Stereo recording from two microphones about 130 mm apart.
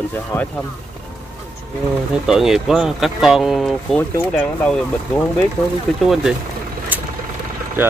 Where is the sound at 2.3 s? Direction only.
5° right (ahead or behind).